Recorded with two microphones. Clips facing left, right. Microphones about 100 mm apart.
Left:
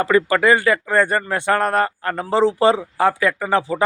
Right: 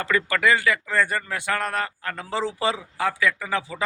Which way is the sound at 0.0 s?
30° left (ahead or behind).